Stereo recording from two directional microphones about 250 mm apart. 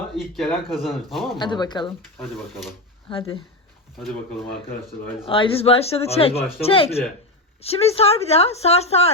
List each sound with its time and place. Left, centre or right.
0.2 s speech: centre
1.4 s speech: centre
5.2 s speech: left